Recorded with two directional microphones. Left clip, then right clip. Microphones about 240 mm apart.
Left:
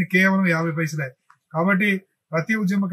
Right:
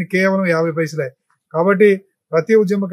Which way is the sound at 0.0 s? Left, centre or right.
Centre.